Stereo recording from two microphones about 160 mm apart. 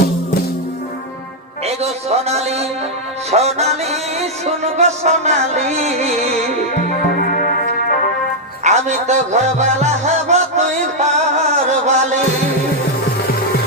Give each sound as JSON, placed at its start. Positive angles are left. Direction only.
{"t": 1.6, "sound": "a man's voice", "side_deg": -40}
{"t": 3.3, "sound": "music", "side_deg": -40}
{"t": 6.9, "sound": "music", "side_deg": 60}
{"t": 8.6, "sound": "music", "side_deg": -45}